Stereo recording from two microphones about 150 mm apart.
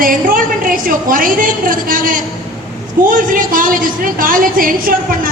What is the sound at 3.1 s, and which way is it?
A woman's voice, 65° right (ahead or behind).